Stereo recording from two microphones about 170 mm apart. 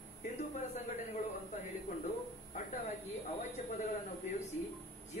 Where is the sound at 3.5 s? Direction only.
45° left (ahead or behind).